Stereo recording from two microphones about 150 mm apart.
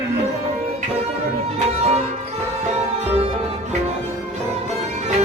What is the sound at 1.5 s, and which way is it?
Music, 45° right (ahead or behind).